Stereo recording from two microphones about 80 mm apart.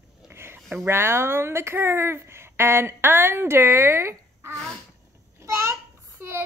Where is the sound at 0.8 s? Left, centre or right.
Right.